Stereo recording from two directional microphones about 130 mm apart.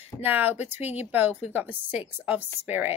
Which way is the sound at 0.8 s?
55° left (ahead or behind).